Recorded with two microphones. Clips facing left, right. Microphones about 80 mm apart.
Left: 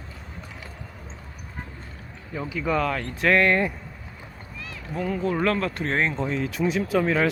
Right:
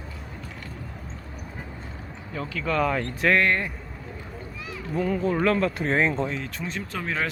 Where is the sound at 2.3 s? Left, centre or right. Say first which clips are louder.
Left 2 dB; centre.